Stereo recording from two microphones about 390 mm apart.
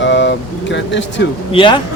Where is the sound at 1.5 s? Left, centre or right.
Centre.